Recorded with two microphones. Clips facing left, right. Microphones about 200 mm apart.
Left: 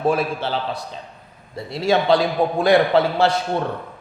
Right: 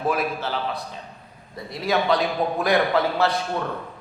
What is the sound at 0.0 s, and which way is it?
A man's voice, 30° left (ahead or behind).